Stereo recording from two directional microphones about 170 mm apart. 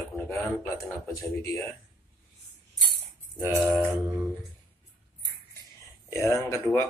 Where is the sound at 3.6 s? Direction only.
5° right (ahead or behind).